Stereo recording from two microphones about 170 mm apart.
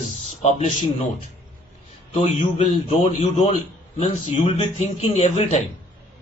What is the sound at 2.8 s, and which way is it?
Speech, 35° left (ahead or behind).